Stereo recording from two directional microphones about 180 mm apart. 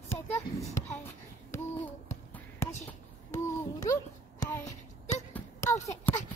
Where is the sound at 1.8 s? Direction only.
15° left (ahead or behind).